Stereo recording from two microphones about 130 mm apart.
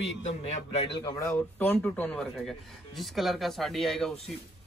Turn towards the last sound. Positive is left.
turn(degrees=5)  # may be behind; listen again after turning